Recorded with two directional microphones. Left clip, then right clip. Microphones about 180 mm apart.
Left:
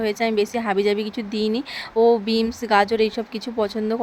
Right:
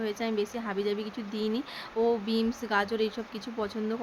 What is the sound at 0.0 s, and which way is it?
Speech, 40° left (ahead or behind).